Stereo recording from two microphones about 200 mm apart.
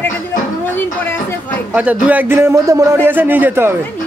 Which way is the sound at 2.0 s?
10° right (ahead or behind).